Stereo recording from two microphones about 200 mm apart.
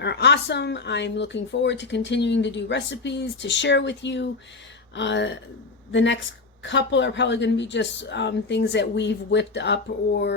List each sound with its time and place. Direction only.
0.0 s speech: 60° left (ahead or behind)